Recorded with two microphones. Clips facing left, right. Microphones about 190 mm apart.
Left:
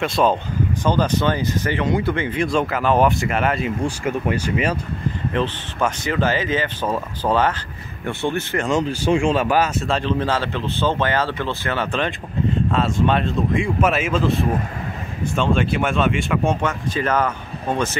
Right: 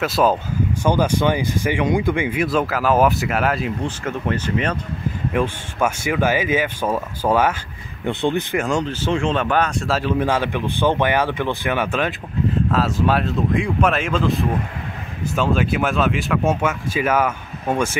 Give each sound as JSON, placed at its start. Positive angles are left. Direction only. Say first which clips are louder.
{"t": 0.0, "sound": "speech", "louder": "right 1 dB", "side_deg": -5}
{"t": 3.8, "sound": "speech", "louder": "left 2 dB", "side_deg": 10}
{"t": 5.3, "sound": "speech", "louder": "right 3 dB", "side_deg": -10}
{"t": 8.6, "sound": "speech", "louder": "left 2 dB", "side_deg": 5}